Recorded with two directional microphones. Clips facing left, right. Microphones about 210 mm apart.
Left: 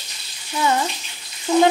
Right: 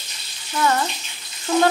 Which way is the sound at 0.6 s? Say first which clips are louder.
Even; 15° left (ahead or behind).